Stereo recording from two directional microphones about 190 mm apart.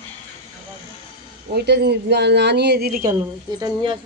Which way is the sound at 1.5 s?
60° right (ahead or behind).